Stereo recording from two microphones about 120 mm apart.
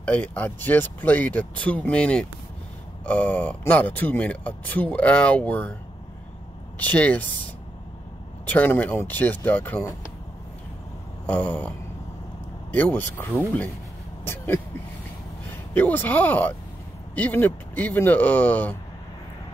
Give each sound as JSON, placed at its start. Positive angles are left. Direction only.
{"t": 0.0, "sound": "speech", "side_deg": 15}
{"t": 6.8, "sound": "speech", "side_deg": 10}
{"t": 8.5, "sound": "speech", "side_deg": 15}
{"t": 11.2, "sound": "speech", "side_deg": 15}
{"t": 12.7, "sound": "speech", "side_deg": 15}